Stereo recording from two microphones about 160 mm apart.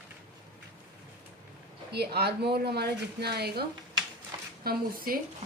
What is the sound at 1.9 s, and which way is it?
Speech, 85° right.